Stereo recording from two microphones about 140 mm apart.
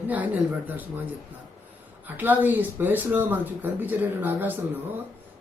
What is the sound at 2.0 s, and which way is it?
Speech, 15° right (ahead or behind).